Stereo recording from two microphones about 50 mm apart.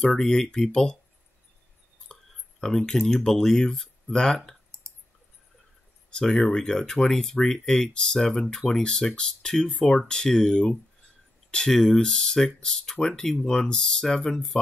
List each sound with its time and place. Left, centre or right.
0.0 s speech: centre
2.1 s a sound: centre
2.6 s speech: centre
6.0 s speech: centre